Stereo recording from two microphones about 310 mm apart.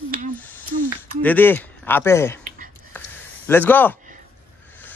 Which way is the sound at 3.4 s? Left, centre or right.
Centre.